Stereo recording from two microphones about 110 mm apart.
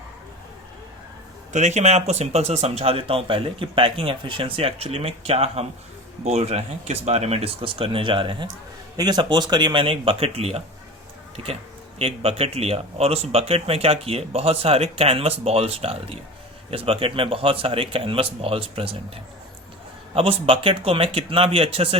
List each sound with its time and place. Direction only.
1.5 s speech: 90° right; by 10.6 s 65° right (ahead or behind)
11.9 s speech: 65° right (ahead or behind)